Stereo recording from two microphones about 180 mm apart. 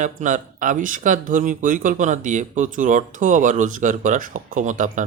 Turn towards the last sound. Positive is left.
turn(degrees=-45)  # may be behind; listen again after turning